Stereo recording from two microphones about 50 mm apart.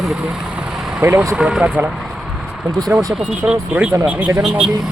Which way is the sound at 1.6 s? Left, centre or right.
Right.